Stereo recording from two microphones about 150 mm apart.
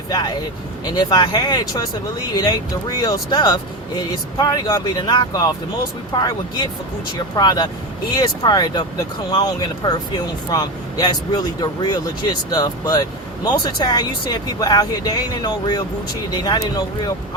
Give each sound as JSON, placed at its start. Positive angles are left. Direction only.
{"t": 0.1, "sound": "speech", "side_deg": 25}